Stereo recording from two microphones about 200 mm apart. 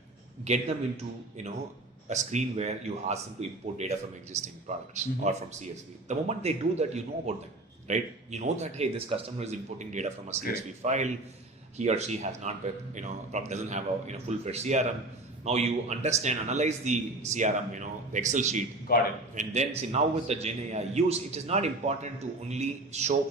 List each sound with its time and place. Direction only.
0.4 s a man's voice: 35° right (ahead or behind)
2.0 s a man's voice: 35° right (ahead or behind)
18.9 s a man's voice: 50° left (ahead or behind)
19.3 s a man's voice: 35° right (ahead or behind)